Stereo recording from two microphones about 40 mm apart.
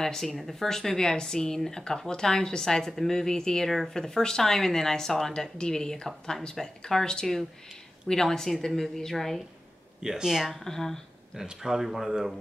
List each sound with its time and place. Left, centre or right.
0.0 s speech: centre
10.0 s speech: centre
10.5 s speech: centre
11.3 s speech: centre